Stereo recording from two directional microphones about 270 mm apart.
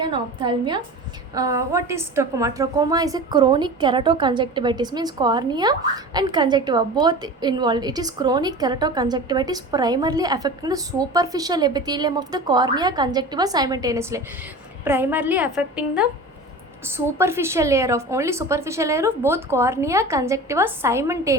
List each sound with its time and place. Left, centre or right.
0.0 s a woman's voice: centre
17.1 s a woman's voice: centre